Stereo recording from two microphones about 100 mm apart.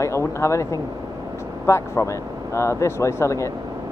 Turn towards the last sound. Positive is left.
turn(degrees=30)  # may be behind; listen again after turning